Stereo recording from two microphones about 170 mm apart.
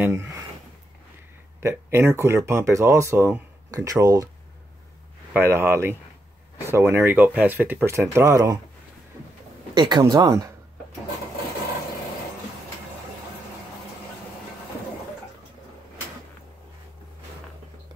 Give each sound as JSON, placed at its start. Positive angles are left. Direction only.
{"t": 0.0, "sound": "speech", "side_deg": -15}
{"t": 1.6, "sound": "speech", "side_deg": -15}
{"t": 5.3, "sound": "speech", "side_deg": -15}
{"t": 9.8, "sound": "speech", "side_deg": -25}